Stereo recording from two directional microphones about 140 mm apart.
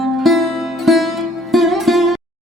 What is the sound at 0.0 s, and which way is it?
Music, centre (ahead or behind).